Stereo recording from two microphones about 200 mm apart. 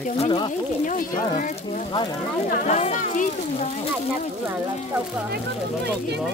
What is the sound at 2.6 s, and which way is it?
Speech, 35° left (ahead or behind).